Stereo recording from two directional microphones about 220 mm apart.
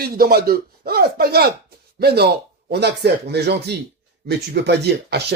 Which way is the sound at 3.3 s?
50° right (ahead or behind).